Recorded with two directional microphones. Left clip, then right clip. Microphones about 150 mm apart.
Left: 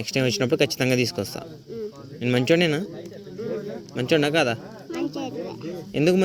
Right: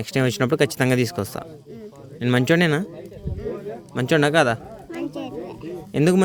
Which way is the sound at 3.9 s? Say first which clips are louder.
Right 3 dB; 90° right.